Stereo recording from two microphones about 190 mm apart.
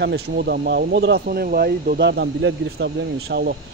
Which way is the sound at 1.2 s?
50° right (ahead or behind).